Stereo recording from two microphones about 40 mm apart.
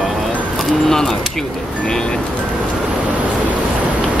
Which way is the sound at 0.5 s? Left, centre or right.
Centre.